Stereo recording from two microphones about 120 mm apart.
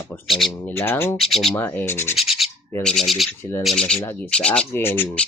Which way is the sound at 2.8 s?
5° left (ahead or behind).